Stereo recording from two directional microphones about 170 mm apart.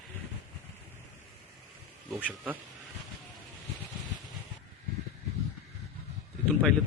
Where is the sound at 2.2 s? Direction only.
10° right (ahead or behind).